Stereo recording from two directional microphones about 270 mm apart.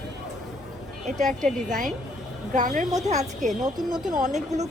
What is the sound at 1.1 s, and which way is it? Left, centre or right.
A woman's voice, right.